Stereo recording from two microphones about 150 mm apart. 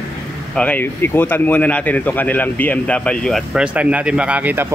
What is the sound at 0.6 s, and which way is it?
Speech, 10° left (ahead or behind).